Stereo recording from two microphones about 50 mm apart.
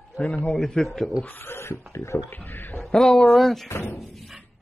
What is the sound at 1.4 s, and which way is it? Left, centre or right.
Speech, left.